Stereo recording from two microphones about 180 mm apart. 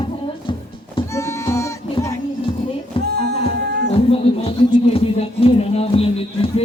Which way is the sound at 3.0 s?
65° right (ahead or behind).